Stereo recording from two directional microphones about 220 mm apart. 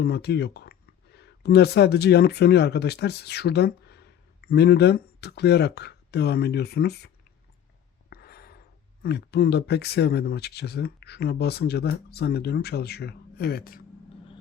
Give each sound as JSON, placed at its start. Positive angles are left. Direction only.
{"t": 0.0, "sound": "speech", "side_deg": 50}
{"t": 8.1, "sound": "a sound", "side_deg": 45}
{"t": 9.0, "sound": "speech", "side_deg": 50}